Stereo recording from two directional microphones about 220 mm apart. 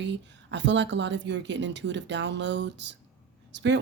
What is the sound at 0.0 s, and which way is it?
A woman's voice, 55° right (ahead or behind).